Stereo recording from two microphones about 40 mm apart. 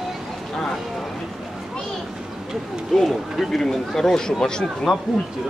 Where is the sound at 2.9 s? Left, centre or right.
Centre.